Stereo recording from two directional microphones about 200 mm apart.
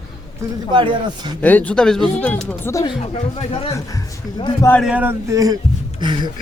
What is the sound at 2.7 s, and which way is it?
Speech, 15° left (ahead or behind).